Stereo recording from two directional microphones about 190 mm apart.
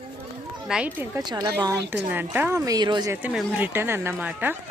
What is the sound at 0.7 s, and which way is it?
Speech, 5° right (ahead or behind).